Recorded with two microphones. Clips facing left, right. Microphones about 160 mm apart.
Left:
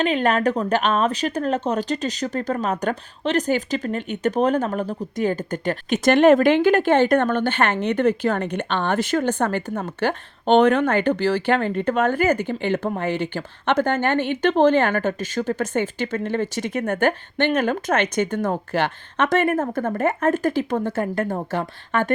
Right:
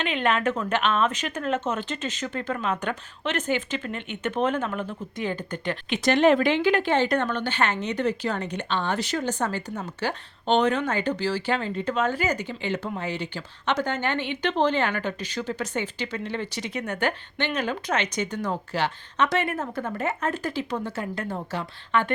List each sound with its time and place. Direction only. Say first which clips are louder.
0.0 s speech: left 5 dB; 40° left (ahead or behind)